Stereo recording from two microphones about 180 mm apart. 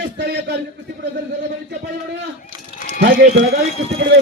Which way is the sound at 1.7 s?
70° right (ahead or behind).